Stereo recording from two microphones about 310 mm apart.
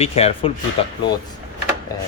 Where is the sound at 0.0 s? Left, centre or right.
Centre.